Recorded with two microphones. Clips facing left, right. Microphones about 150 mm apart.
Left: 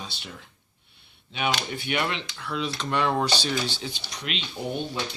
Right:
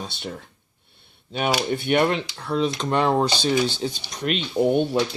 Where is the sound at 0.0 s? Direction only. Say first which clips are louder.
Right 7 dB; 45° right (ahead or behind).